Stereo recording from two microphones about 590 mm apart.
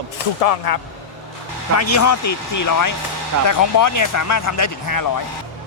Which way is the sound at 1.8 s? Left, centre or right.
Left.